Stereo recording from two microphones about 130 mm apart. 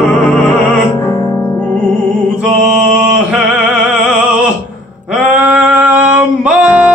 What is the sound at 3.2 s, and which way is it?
Music, 5° right (ahead or behind).